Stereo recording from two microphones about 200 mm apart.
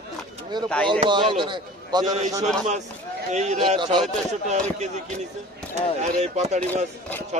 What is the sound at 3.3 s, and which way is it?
Speech, 35° right (ahead or behind).